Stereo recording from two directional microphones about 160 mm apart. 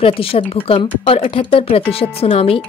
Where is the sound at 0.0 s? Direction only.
35° left (ahead or behind).